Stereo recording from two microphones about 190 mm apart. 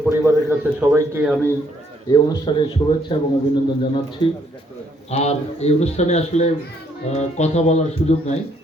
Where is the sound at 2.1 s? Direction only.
25° left (ahead or behind).